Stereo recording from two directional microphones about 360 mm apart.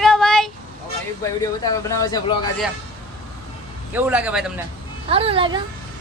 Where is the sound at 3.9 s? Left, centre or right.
Centre.